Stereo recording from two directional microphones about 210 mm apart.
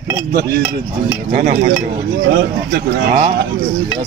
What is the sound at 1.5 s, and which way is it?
Speech, 40° right (ahead or behind).